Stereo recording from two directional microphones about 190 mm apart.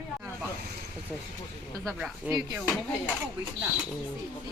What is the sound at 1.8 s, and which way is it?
Speech, centre (ahead or behind).